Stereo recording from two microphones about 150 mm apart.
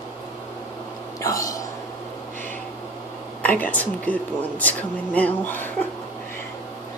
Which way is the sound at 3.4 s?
10° left (ahead or behind).